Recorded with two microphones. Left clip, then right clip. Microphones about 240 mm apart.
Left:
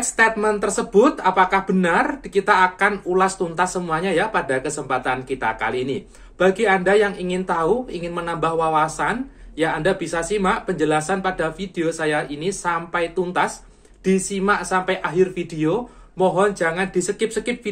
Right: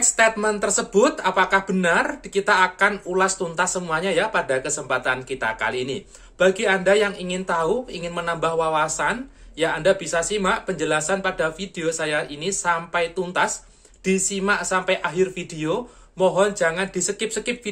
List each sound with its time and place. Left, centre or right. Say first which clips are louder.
0.1 s speech: left 3 dB; centre